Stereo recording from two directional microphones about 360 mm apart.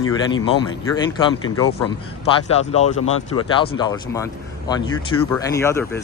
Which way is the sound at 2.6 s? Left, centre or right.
Centre.